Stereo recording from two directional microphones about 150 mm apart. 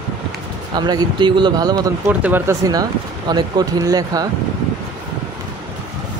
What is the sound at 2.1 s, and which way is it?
Speech, 10° right (ahead or behind).